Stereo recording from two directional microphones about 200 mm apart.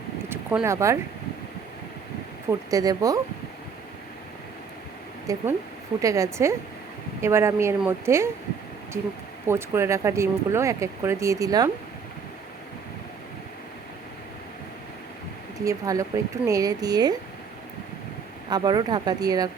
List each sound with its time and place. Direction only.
0.3 s speech: 10° right (ahead or behind)
2.5 s speech: 15° right (ahead or behind)
5.2 s speech: 15° right (ahead or behind)
9.5 s speech: 15° right (ahead or behind)
15.6 s speech: 15° right (ahead or behind)
18.5 s speech: 20° right (ahead or behind)